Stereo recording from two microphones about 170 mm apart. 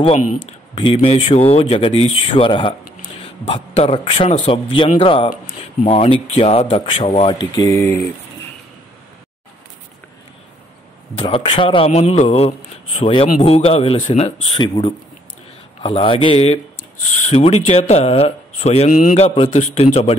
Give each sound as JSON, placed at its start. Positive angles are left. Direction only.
{"t": 0.7, "sound": "a man's voice", "side_deg": 30}
{"t": 7.3, "sound": "mantra", "side_deg": 20}
{"t": 11.2, "sound": "a man's voice", "side_deg": 30}
{"t": 17.0, "sound": "a man's voice", "side_deg": 45}
{"t": 18.9, "sound": "a man's voice", "side_deg": 55}
{"t": 19.1, "sound": "a man's voice", "side_deg": 35}